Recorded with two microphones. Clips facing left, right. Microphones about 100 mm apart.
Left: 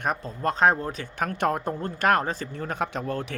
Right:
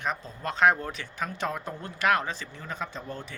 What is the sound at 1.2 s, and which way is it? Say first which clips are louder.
Speech: left 7 dB; 55° left (ahead or behind).